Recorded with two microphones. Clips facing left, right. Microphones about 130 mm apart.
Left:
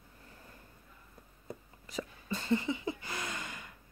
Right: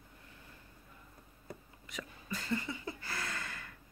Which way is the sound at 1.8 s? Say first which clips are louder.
Left 5 dB; 30° left (ahead or behind).